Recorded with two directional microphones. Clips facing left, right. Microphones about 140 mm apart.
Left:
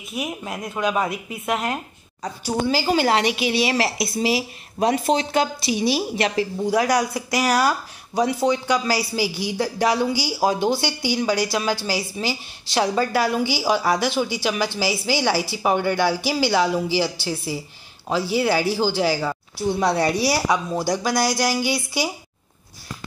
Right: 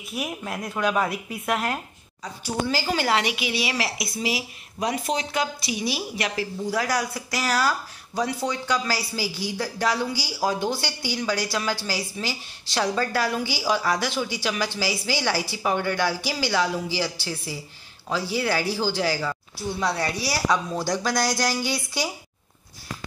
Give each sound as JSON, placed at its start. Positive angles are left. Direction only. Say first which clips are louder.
{"t": 0.2, "sound": "speech", "louder": "left 2 dB", "side_deg": 0}
{"t": 2.6, "sound": "a woman's voice", "louder": "left 5 dB", "side_deg": 20}